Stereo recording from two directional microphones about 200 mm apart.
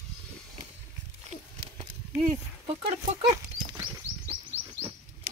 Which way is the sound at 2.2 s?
30° right (ahead or behind).